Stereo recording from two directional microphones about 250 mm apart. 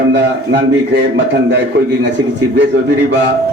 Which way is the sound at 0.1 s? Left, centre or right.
Right.